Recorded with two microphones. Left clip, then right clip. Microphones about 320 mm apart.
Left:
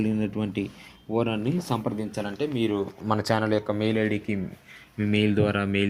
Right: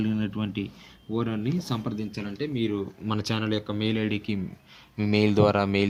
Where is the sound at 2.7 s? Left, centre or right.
Left.